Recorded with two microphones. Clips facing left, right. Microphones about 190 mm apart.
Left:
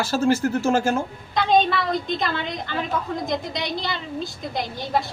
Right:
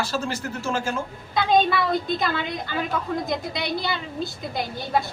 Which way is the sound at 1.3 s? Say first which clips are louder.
Left 1 dB; 5° right (ahead or behind).